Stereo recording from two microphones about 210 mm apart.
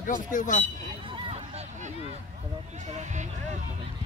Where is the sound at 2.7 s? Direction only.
35° right (ahead or behind).